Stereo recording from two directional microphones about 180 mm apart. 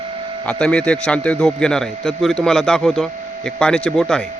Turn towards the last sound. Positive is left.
turn(degrees=5)  # may be behind; listen again after turning